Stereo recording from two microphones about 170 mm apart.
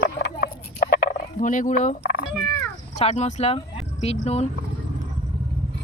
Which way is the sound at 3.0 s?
40° left (ahead or behind).